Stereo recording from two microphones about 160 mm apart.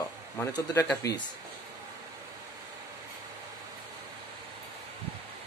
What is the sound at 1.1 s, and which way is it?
Speech, 90° left.